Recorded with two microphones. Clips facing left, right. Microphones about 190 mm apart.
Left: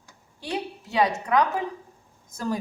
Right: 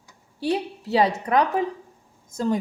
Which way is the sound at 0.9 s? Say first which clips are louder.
Right 3 dB; 30° right (ahead or behind).